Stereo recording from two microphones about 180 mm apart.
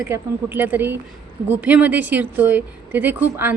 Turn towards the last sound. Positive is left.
turn(degrees=-10)  # may be behind; listen again after turning